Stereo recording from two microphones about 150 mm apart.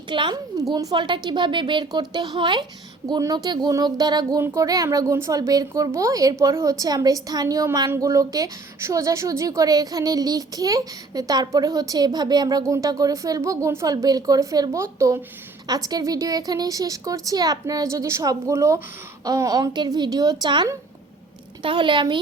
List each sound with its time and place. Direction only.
0.1 s a woman's voice: 30° right (ahead or behind)